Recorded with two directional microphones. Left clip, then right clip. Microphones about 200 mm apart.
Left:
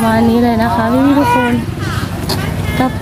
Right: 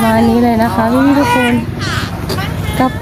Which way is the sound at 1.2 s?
30° right (ahead or behind).